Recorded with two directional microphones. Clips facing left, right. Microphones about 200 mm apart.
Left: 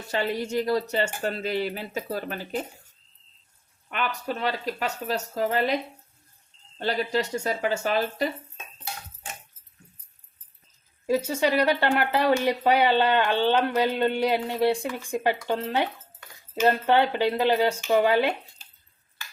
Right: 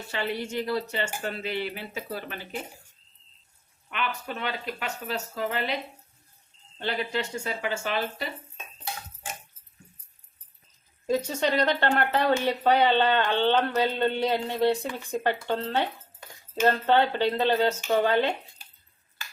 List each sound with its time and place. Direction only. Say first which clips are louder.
0.1 s speech: left 4 dB; 40° left (ahead or behind)
3.8 s speech: left 3 dB; 40° left (ahead or behind)
6.7 s speech: left 4 dB; 40° left (ahead or behind)
11.0 s speech: left 2 dB; 5° left (ahead or behind)